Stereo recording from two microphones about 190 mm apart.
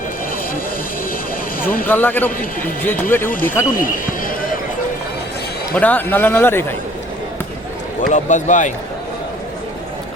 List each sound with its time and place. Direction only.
1.6 s speech: 50° left (ahead or behind)
1.9 s a man's voice: 10° left (ahead or behind)
2.4 s speech: 45° left (ahead or behind)
2.8 s a man's voice: 10° left (ahead or behind)
3.7 s speech: 45° left (ahead or behind)
5.7 s a man's voice: 10° left (ahead or behind)
8.1 s a man's voice: 40° left (ahead or behind)